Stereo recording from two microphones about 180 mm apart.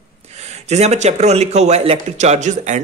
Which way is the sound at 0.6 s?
40° right (ahead or behind).